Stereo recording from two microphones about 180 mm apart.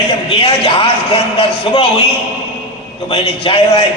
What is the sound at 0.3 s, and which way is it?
A man's voice, 30° left (ahead or behind).